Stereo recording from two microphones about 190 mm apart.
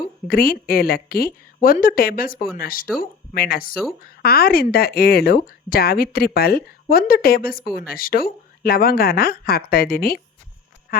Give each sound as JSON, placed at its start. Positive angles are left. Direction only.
{"t": 0.3, "sound": "speech", "side_deg": 50}